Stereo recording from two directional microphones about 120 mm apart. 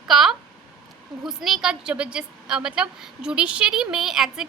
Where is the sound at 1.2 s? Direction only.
Centre (ahead or behind).